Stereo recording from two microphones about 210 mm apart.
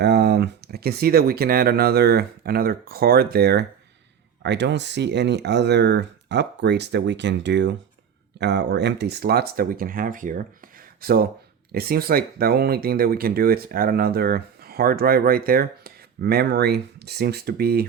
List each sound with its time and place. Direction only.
0.0 s speech: 50° right (ahead or behind)